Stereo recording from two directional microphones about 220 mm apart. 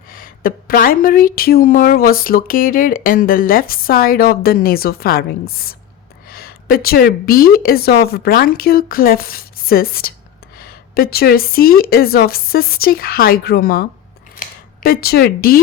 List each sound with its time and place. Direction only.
0.1 s a woman's voice: 40° left (ahead or behind)
6.2 s a woman's voice: 45° left (ahead or behind)